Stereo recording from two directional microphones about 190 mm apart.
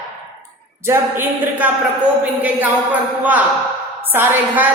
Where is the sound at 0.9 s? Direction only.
10° right (ahead or behind).